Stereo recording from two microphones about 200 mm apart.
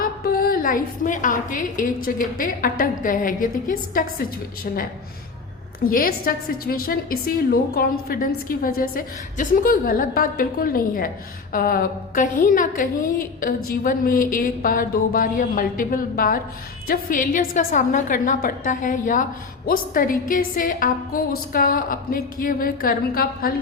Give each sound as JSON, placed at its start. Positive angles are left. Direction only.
{"t": 0.0, "sound": "a woman's voice", "side_deg": 45}